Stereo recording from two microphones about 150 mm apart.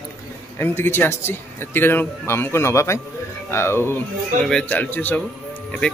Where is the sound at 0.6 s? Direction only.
15° left (ahead or behind).